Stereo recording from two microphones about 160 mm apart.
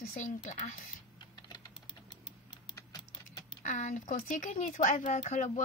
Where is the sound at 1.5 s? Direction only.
25° left (ahead or behind).